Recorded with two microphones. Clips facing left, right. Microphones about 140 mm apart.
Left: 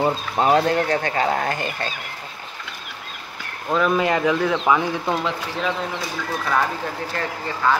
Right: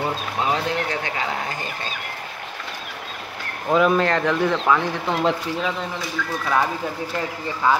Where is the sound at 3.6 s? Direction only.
5° right (ahead or behind).